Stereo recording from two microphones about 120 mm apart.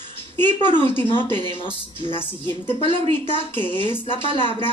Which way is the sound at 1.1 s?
45° left (ahead or behind).